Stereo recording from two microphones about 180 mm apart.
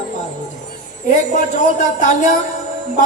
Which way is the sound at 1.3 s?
40° left (ahead or behind).